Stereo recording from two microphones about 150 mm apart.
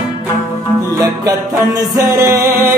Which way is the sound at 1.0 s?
25° right (ahead or behind).